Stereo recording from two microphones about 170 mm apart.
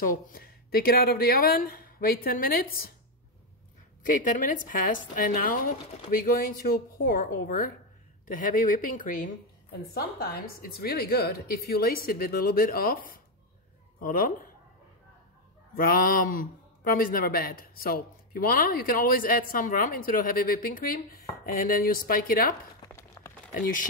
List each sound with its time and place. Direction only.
0.1 s a man's voice: 60° left (ahead or behind)
4.0 s a man's voice: 50° left (ahead or behind)
9.9 s a man's voice: 65° left (ahead or behind)
15.7 s a man's voice: 55° left (ahead or behind)
22.9 s a sound: 20° left (ahead or behind)
23.5 s speech: 55° left (ahead or behind)